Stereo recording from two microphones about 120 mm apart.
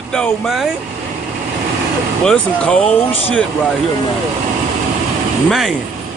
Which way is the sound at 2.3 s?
10° left (ahead or behind).